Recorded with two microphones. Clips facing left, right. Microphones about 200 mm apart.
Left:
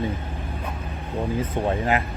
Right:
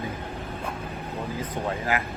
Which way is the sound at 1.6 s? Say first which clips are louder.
Left 5 dB; 20° left (ahead or behind).